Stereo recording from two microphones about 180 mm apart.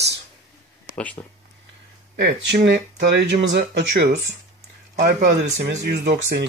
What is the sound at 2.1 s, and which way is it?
Speech, 75° right (ahead or behind).